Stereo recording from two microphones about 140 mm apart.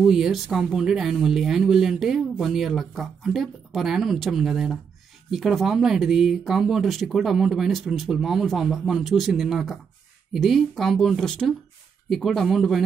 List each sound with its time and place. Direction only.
0.0 s speech: centre (ahead or behind)